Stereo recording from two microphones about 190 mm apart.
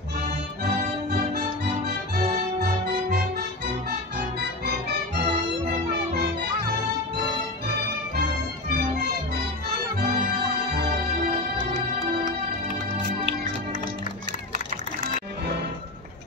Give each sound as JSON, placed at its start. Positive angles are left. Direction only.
{"t": 1.9, "sound": "music", "side_deg": -55}
{"t": 4.2, "sound": "music", "side_deg": -60}